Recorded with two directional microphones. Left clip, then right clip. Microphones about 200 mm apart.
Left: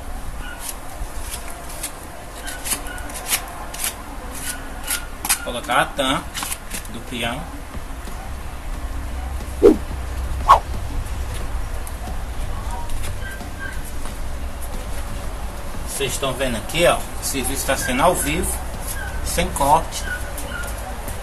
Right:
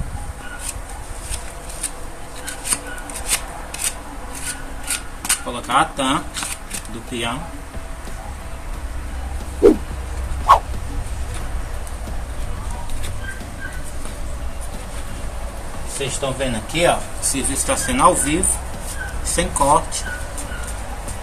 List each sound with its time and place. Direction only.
5.2 s speech: 15° right (ahead or behind)
9.6 s a sound: centre (ahead or behind)
16.0 s speech: centre (ahead or behind)
17.3 s speech: 15° right (ahead or behind)